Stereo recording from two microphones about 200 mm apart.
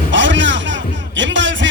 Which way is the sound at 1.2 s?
65° right (ahead or behind).